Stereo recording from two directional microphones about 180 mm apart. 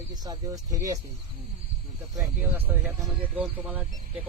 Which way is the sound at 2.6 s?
10° right (ahead or behind).